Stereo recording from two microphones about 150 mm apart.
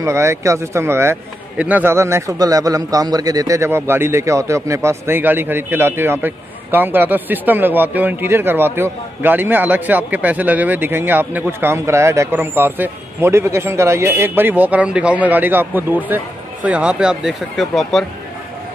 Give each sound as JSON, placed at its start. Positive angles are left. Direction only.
{"t": 0.0, "sound": "a man's voice", "side_deg": -20}